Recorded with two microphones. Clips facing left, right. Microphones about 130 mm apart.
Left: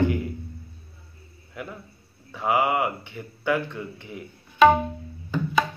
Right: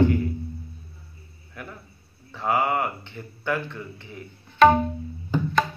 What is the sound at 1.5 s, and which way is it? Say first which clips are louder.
Speech: left 3 dB; 15° left (ahead or behind).